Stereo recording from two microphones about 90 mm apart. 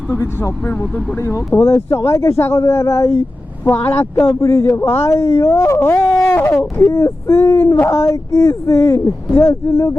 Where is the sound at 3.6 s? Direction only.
20° left (ahead or behind).